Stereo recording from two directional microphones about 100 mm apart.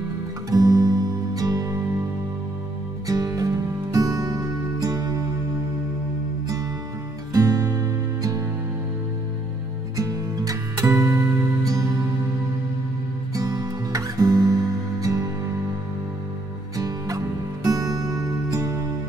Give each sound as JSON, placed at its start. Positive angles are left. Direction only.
{"t": 0.5, "sound": "music", "side_deg": -35}
{"t": 3.1, "sound": "music", "side_deg": -35}
{"t": 7.3, "sound": "music", "side_deg": -35}
{"t": 9.9, "sound": "music", "side_deg": -35}
{"t": 13.3, "sound": "music", "side_deg": -35}
{"t": 16.7, "sound": "music", "side_deg": -35}